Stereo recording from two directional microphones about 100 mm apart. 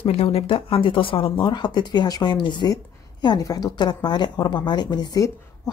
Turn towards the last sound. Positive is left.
turn(degrees=35)  # may be behind; listen again after turning